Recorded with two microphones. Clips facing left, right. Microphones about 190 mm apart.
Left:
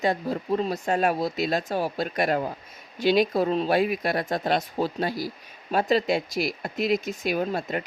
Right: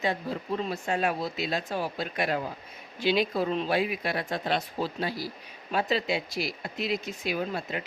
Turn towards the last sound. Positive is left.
turn(degrees=40)  # may be behind; listen again after turning